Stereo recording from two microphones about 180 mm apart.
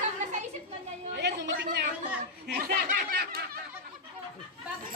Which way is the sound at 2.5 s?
55° right (ahead or behind).